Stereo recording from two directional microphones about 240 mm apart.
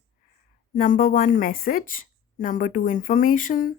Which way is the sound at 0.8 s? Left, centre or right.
Left.